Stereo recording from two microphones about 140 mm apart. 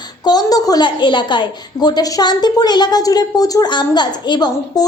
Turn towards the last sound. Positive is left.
turn(degrees=30)  # may be behind; listen again after turning